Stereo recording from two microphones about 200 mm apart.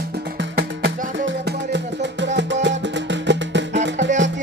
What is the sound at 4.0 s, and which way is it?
Music, 35° right (ahead or behind).